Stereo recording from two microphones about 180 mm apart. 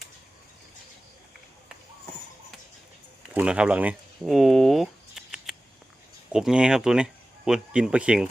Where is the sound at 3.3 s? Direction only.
5° right (ahead or behind).